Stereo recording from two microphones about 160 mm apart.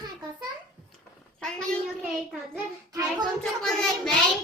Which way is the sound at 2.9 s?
25° right (ahead or behind).